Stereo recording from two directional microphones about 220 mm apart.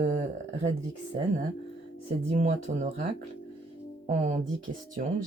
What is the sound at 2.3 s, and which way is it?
Speech, 35° right (ahead or behind).